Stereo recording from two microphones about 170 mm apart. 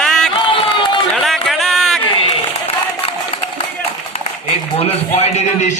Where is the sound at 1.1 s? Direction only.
Centre (ahead or behind).